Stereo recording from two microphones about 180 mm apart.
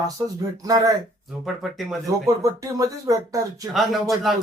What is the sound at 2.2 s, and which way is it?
Speech, 20° right (ahead or behind).